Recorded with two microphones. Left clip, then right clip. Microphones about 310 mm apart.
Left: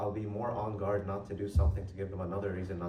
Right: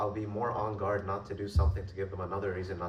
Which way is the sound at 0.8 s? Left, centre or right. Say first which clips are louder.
Right 2 dB; centre.